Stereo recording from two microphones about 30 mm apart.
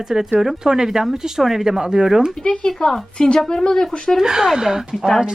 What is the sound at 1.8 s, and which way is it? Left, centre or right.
Speech, right.